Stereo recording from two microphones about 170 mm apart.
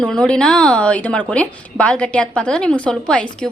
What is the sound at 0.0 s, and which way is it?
Speech, 5° left (ahead or behind).